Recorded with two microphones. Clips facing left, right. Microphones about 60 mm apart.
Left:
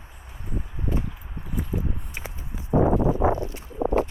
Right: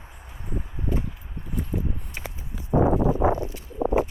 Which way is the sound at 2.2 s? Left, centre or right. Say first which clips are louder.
Even; centre.